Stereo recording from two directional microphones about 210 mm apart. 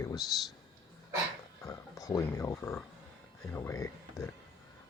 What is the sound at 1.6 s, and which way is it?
Speech, 15° left (ahead or behind).